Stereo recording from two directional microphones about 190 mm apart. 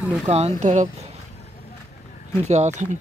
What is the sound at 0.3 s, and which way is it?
Speech, 35° right (ahead or behind).